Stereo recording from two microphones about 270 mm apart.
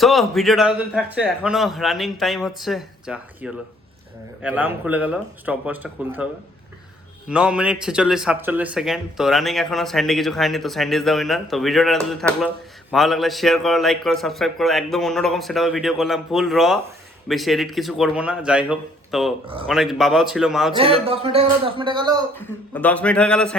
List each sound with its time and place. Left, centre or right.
0.0 s speech: centre
7.3 s speech: centre
20.7 s speech: right
22.4 s speech: centre